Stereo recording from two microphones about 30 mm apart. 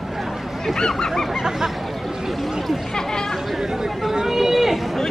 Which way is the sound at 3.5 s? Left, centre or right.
Centre.